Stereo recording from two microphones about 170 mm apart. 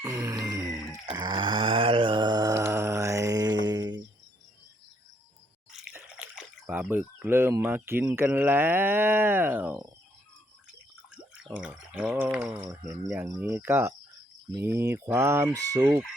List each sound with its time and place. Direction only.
0.0 s grunt: 15° right (ahead or behind)
0.7 s chicken: centre (ahead or behind)
1.1 s a sound: 25° right (ahead or behind)
5.7 s speech: 5° right (ahead or behind)
11.4 s speech: 5° right (ahead or behind)
15.5 s chicken: 20° right (ahead or behind)